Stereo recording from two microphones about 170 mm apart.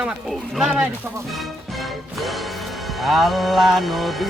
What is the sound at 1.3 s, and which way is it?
Music, centre (ahead or behind).